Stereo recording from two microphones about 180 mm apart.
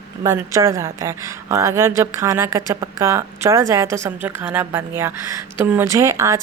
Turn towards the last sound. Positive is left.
turn(degrees=-15)  # may be behind; listen again after turning